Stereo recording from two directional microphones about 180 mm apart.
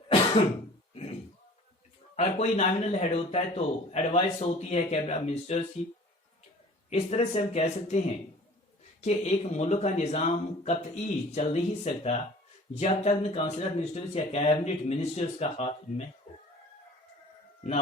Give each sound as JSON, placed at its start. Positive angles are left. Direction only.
{"t": 2.1, "sound": "speech", "side_deg": 40}
{"t": 6.9, "sound": "speech", "side_deg": 35}